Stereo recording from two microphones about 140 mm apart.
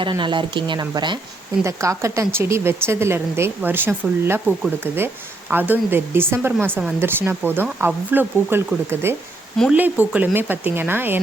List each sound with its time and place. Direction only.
0.0 s speech: 35° right (ahead or behind)
1.6 s a woman's voice: 20° right (ahead or behind)